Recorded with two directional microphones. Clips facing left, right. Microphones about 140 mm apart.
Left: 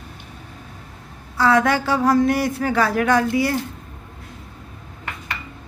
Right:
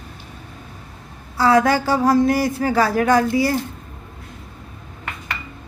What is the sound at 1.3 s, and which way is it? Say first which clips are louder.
A woman's voice: right 2 dB; 35° right (ahead or behind).